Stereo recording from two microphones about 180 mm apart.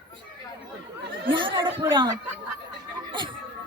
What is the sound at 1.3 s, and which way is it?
Speech, 25° right (ahead or behind).